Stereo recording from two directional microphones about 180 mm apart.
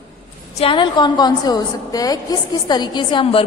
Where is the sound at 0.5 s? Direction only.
30° left (ahead or behind).